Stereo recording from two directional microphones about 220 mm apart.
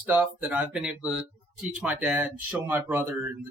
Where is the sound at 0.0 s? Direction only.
10° right (ahead or behind).